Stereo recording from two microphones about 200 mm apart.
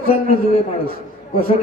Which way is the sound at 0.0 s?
45° right (ahead or behind).